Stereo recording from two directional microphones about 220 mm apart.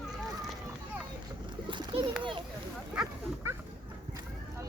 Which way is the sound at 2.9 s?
5° right (ahead or behind).